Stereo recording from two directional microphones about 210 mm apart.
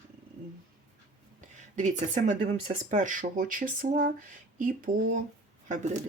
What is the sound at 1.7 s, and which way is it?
Speech, 35° right (ahead or behind).